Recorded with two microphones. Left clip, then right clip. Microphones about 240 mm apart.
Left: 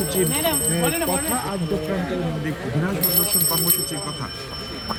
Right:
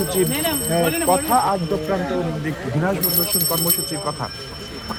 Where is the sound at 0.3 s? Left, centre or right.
Centre.